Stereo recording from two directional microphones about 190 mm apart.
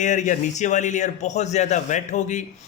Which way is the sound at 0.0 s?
40° left (ahead or behind).